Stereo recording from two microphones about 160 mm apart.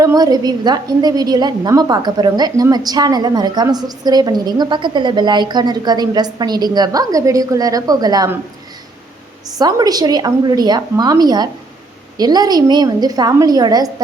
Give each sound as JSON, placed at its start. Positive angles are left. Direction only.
{"t": 0.0, "sound": "a woman's voice", "side_deg": -25}
{"t": 9.6, "sound": "a woman's voice", "side_deg": -25}